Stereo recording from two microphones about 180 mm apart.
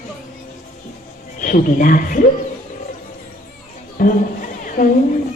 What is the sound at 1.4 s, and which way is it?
Speech, 50° left (ahead or behind).